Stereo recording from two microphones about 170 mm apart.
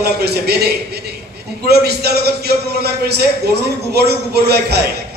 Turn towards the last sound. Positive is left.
turn(degrees=-75)  # may be behind; listen again after turning